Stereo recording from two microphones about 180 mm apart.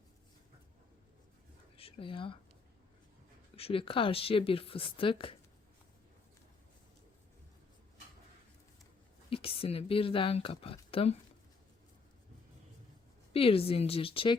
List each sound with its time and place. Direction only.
1.7 s speech: 30° left (ahead or behind)
3.5 s speech: 30° left (ahead or behind)
9.3 s speech: 30° left (ahead or behind)
13.3 s speech: 30° left (ahead or behind)